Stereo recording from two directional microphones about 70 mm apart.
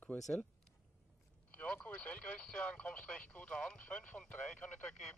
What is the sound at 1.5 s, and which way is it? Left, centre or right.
Speech, centre.